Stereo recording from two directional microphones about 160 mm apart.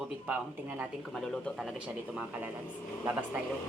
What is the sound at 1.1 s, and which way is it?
Speech, 5° left (ahead or behind).